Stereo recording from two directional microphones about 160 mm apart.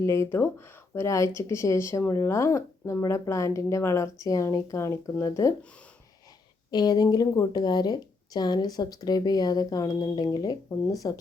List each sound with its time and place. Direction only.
0.0 s speech: 15° left (ahead or behind)
6.7 s speech: 25° left (ahead or behind)